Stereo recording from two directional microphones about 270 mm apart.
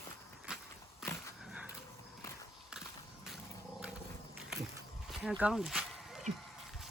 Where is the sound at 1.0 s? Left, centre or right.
Centre.